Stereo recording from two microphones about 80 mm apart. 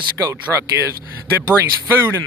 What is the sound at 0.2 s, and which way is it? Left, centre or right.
Speech, right.